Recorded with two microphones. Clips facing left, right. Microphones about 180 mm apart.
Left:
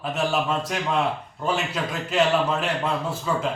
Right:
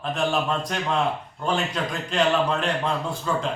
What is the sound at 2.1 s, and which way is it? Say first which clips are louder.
Speech: left 1 dB; 5° left (ahead or behind).